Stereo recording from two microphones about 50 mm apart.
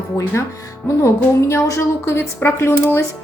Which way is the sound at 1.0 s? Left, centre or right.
Left.